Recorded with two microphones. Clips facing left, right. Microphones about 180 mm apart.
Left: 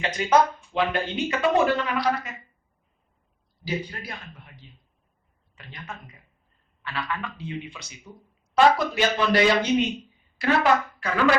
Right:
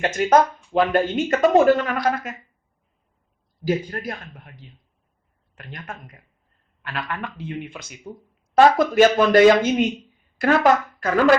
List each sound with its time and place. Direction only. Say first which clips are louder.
0.0 s speech: right 4 dB; 45° right (ahead or behind)
3.6 s speech: right 7 dB; 45° right (ahead or behind)
5.5 s speech: right 3 dB; 50° right (ahead or behind)